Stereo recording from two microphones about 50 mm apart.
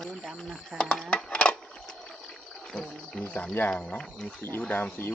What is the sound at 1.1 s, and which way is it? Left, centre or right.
Wood, left.